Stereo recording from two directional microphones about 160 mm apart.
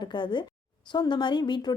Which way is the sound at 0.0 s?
30° left (ahead or behind).